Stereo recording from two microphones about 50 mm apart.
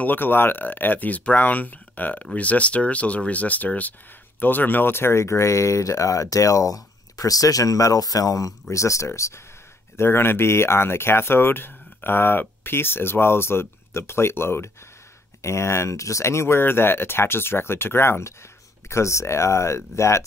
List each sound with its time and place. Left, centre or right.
0.0 s speech: left
8.6 s speech: left
9.9 s speech: left
15.4 s speech: left